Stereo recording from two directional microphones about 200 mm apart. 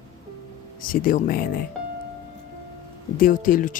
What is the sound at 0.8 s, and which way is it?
Speech, 45° left (ahead or behind).